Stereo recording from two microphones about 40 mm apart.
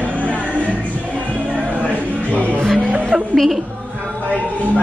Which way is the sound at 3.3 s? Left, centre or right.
Centre.